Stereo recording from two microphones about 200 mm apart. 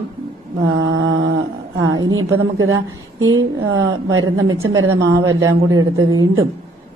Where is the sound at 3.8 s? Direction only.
75° right (ahead or behind).